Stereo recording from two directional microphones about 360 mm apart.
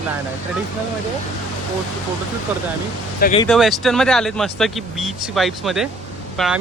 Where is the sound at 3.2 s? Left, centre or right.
Centre.